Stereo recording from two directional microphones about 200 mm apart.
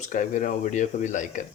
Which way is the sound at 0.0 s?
40° left (ahead or behind).